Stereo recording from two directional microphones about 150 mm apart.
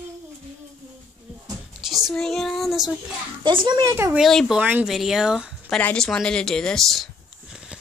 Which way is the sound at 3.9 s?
15° right (ahead or behind).